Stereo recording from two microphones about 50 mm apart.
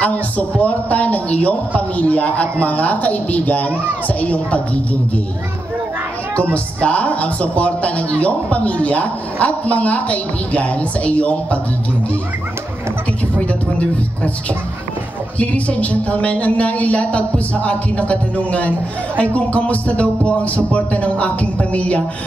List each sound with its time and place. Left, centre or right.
0.0 s a man's voice: left
6.5 s speech: left
15.3 s speech: left